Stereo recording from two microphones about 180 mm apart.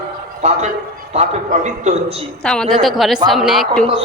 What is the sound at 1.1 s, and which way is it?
A man's voice, 40° right (ahead or behind).